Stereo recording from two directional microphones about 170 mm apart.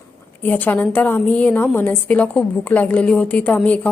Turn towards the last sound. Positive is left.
turn(degrees=10)  # may be behind; listen again after turning